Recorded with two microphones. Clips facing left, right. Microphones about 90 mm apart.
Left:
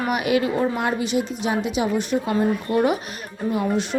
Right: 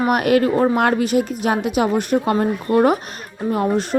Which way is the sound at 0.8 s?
60° right (ahead or behind).